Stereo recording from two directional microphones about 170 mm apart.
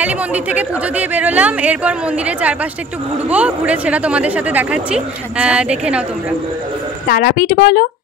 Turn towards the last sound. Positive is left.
turn(degrees=60)  # may be behind; listen again after turning